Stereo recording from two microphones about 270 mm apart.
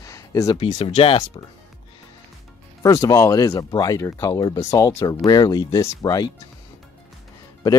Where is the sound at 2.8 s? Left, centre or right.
Centre.